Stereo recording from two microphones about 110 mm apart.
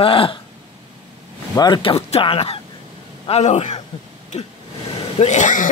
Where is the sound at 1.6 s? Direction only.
45° left (ahead or behind).